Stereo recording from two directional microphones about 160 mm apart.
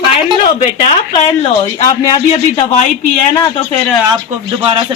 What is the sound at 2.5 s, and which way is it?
Speech, 45° left (ahead or behind).